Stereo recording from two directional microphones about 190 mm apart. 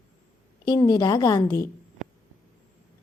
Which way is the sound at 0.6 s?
20° left (ahead or behind).